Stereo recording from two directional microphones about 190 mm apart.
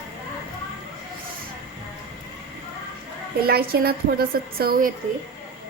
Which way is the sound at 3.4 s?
55° right (ahead or behind).